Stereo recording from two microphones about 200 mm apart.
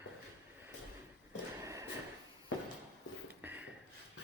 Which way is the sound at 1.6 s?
15° right (ahead or behind).